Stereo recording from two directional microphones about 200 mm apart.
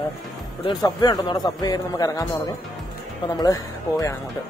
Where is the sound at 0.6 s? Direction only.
20° left (ahead or behind).